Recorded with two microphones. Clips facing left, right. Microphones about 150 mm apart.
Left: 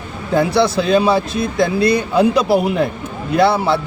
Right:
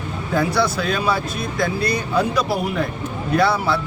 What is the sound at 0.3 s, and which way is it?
A man's voice, 25° left (ahead or behind).